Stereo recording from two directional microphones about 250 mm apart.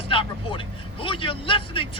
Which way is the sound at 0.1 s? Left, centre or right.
Centre.